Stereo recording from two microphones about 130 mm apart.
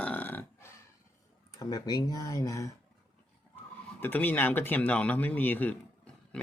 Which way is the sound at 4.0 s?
15° left (ahead or behind).